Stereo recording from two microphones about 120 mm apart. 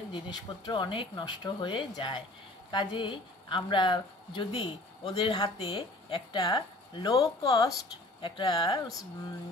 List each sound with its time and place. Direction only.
0.1 s a woman's voice: 40° left (ahead or behind)
8.2 s a woman's voice: 40° left (ahead or behind)